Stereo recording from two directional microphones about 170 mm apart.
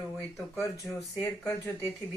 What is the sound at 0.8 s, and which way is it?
Speech, centre (ahead or behind).